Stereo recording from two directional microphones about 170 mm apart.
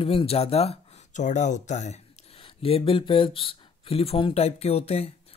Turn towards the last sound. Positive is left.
turn(degrees=40)  # may be behind; listen again after turning